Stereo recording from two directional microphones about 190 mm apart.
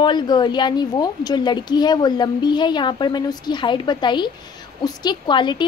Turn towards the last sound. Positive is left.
turn(degrees=25)  # may be behind; listen again after turning